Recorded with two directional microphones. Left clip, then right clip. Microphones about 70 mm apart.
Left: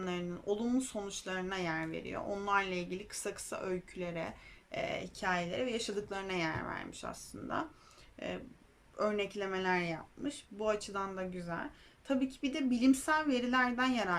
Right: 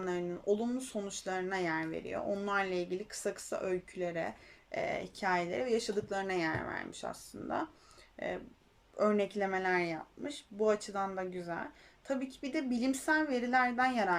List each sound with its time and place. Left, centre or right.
0.0 s speech: left
9.0 s speech: left